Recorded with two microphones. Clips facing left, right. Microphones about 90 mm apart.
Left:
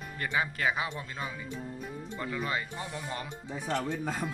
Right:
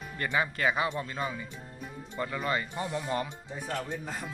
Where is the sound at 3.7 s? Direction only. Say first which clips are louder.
Left 3 dB; 90° left.